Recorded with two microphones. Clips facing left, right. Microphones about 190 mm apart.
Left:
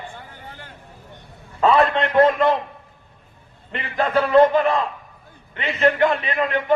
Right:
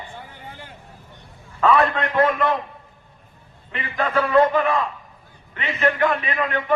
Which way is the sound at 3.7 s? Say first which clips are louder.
Left 2 dB; 30° left (ahead or behind).